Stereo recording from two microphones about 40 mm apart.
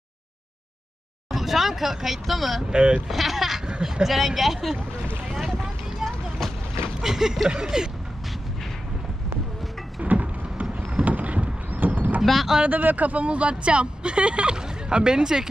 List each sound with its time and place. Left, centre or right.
1.3 s speech: centre
2.6 s speech: right
3.1 s bleat: centre
3.6 s a sound: right
4.0 s speech: centre
5.4 s boat: centre
6.4 s vehicle: centre
7.0 s speech: centre
10.0 s a sound: right
12.2 s speech: centre
12.6 s speech: right; by 15.4 s centre